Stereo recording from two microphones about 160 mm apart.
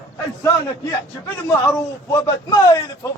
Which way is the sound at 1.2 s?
15° left (ahead or behind).